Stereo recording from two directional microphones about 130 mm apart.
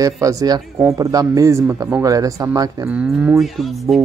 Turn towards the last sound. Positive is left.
turn(degrees=0)  # may be behind; listen again after turning